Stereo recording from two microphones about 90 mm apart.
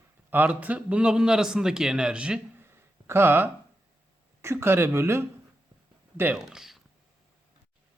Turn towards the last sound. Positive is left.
turn(degrees=-5)  # may be behind; listen again after turning